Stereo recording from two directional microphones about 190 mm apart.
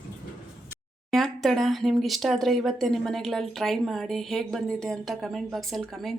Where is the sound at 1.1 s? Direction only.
Centre (ahead or behind).